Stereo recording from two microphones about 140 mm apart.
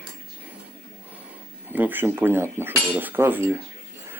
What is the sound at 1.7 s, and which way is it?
Speech, 15° right (ahead or behind).